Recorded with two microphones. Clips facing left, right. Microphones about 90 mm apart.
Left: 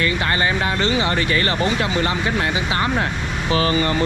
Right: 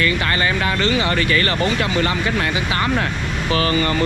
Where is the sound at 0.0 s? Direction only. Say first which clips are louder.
Right 1 dB; 25° left (ahead or behind).